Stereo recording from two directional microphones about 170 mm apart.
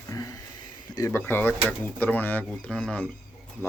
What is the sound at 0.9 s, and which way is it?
Speech, 15° left (ahead or behind).